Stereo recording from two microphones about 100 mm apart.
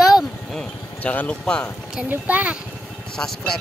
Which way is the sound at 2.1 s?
15° right (ahead or behind).